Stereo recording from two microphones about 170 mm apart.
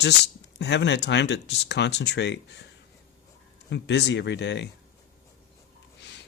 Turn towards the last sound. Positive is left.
turn(degrees=90)